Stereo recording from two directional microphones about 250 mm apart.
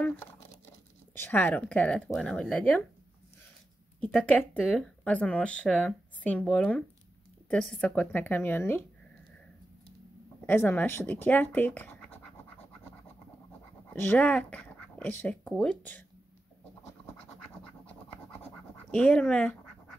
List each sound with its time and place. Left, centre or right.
1.1 s speech: centre
4.0 s speech: centre
10.4 s speech: centre
14.1 s speech: centre
17.8 s scratch: centre